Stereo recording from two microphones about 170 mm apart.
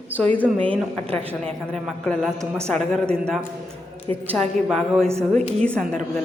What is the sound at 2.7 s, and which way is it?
A woman's voice, 5° left (ahead or behind).